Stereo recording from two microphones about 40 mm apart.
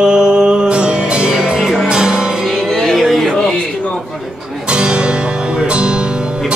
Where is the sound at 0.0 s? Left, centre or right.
Centre.